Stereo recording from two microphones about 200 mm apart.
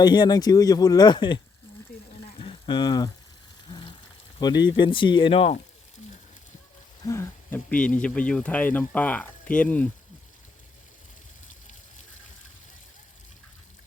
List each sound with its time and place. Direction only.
0.0 s speech: 20° left (ahead or behind)
2.4 s a sound: 25° left (ahead or behind)
4.4 s speech: 20° left (ahead or behind)
7.0 s speech: 15° left (ahead or behind)